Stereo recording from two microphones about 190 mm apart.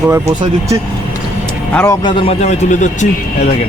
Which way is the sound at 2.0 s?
30° left (ahead or behind).